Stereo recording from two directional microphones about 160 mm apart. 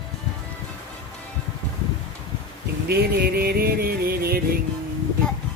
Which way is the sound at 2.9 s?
80° right.